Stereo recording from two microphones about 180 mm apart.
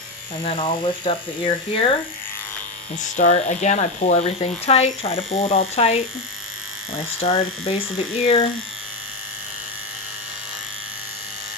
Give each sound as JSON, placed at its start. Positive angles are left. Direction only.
{"t": 0.4, "sound": "speech", "side_deg": 30}
{"t": 3.0, "sound": "speech", "side_deg": 40}